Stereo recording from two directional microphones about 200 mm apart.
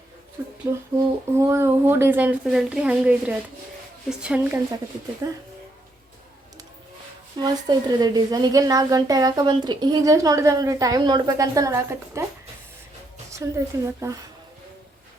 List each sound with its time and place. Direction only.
0.7 s a woman's voice: 15° right (ahead or behind)
5.2 s a woman's voice: 15° right (ahead or behind)
7.3 s a woman's voice: 20° right (ahead or behind)
13.3 s a woman's voice: 15° right (ahead or behind)